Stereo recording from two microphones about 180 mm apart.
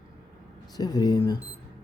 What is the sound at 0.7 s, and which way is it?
Speech, 20° left (ahead or behind).